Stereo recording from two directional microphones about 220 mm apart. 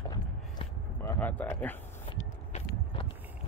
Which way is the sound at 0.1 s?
20° left (ahead or behind).